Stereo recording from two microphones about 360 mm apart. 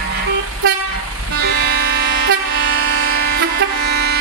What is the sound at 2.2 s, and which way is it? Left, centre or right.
Vehicle, right.